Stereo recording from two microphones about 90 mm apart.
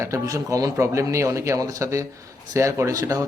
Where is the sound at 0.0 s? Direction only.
35° right (ahead or behind).